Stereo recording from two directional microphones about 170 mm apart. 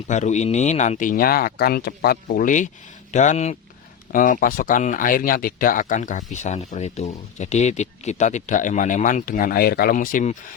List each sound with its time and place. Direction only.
0.1 s speech: 45° left (ahead or behind)
4.1 s speech: 55° left (ahead or behind)